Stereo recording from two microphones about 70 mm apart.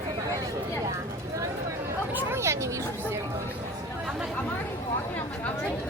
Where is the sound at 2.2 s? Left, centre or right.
Right.